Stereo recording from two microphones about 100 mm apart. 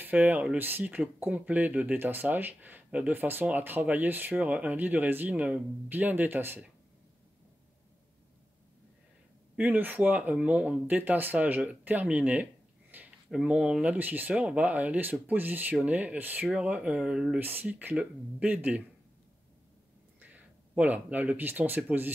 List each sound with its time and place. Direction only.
0.0 s speech: 20° right (ahead or behind)
9.6 s speech: 15° right (ahead or behind)
12.9 s a sound: 20° right (ahead or behind)
13.3 s speech: 5° right (ahead or behind)
17.4 s speech: 20° right (ahead or behind)
20.7 s speech: 15° right (ahead or behind)